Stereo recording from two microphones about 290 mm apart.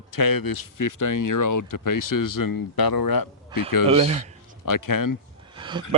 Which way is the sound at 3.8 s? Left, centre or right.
Right.